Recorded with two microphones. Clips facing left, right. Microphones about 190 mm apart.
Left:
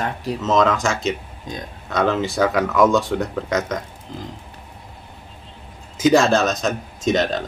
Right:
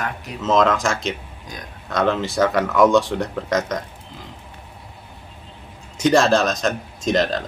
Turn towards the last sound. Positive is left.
turn(degrees=0)  # may be behind; listen again after turning